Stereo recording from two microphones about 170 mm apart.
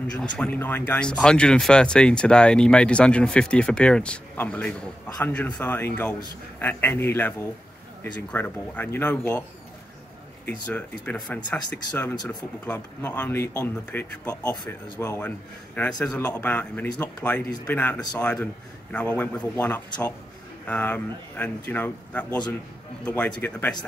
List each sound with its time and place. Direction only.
0.2 s speech: 10° left (ahead or behind)
10.7 s speech: 10° left (ahead or behind)
17.9 s speech: 25° left (ahead or behind)
18.2 s speech: 10° left (ahead or behind)